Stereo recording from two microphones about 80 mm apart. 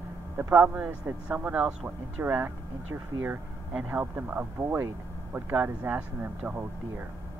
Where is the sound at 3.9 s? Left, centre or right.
Right.